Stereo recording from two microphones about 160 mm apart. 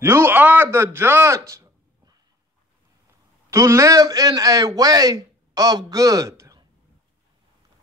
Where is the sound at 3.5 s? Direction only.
20° right (ahead or behind).